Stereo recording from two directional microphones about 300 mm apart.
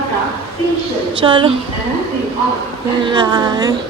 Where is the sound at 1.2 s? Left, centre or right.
Centre.